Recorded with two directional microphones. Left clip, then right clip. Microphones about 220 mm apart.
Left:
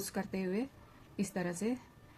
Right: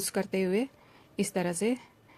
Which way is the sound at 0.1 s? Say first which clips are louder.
Right 11 dB; 45° right (ahead or behind).